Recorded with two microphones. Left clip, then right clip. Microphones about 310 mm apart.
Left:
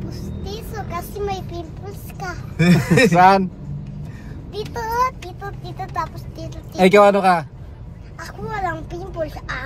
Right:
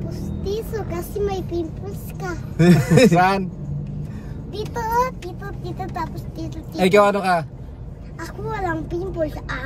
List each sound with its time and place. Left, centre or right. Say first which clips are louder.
0.5 s speech: right 4 dB; centre
2.5 s a man's voice: right 1 dB; centre
3.1 s a man's voice: left 5 dB; centre
4.6 s speech: even; centre
6.8 s a man's voice: left 4 dB; centre
8.5 s speech: even; centre